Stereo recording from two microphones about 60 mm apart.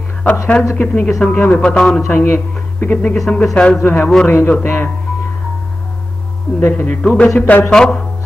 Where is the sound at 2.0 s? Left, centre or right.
Left.